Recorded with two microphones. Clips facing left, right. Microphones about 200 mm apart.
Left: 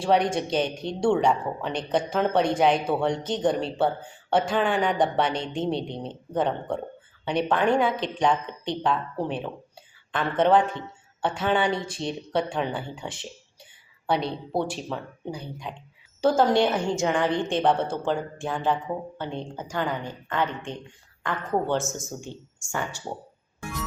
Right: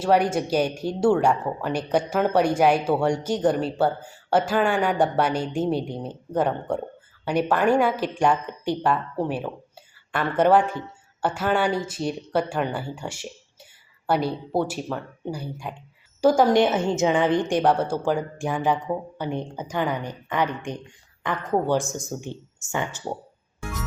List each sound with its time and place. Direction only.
0.0 s speech: 5° right (ahead or behind)